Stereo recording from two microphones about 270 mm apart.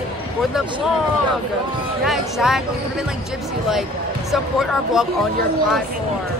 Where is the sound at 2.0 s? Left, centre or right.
Centre.